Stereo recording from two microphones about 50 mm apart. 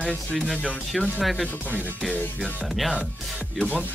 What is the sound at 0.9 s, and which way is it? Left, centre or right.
Speech, centre.